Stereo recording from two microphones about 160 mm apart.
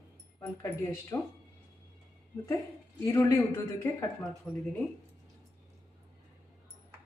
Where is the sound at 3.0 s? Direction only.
20° left (ahead or behind).